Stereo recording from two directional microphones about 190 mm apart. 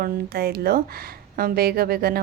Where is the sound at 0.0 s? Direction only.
55° right (ahead or behind).